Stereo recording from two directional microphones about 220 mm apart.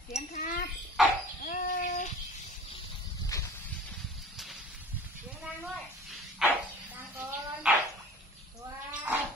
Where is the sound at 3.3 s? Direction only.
15° left (ahead or behind).